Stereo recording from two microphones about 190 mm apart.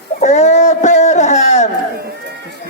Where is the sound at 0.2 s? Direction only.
35° left (ahead or behind).